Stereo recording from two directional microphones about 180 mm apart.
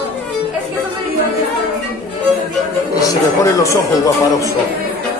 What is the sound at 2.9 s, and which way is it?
Speech, 20° left (ahead or behind).